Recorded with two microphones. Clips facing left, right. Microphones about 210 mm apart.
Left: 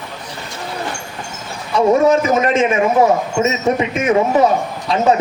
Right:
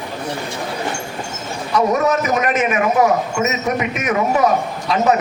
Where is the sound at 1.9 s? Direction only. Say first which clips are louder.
Left 9 dB; 25° left (ahead or behind).